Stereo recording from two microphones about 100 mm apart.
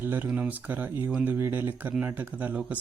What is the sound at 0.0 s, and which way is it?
Speech, 20° right (ahead or behind).